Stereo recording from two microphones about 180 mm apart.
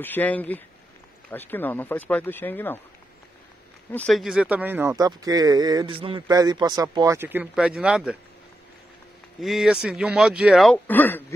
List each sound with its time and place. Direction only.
0.0 s speech: 10° left (ahead or behind)
3.9 s speech: 5° left (ahead or behind)
9.4 s speech: centre (ahead or behind)